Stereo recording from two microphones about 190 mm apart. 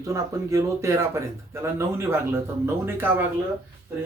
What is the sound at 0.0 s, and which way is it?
Speech, 15° right (ahead or behind).